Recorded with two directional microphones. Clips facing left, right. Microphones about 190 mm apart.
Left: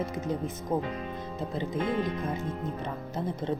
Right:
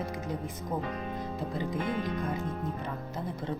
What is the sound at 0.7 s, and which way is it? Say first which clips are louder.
Speech: left 5 dB; 25° left (ahead or behind).